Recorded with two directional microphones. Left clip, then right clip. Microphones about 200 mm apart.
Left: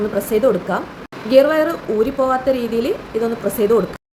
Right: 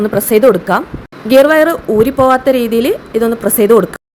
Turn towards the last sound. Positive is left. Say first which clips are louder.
# right 7 dB
turn(degrees=-45)  # may be behind; listen again after turning